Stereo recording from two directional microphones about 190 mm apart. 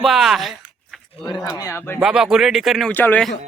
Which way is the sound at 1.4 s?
15° left (ahead or behind).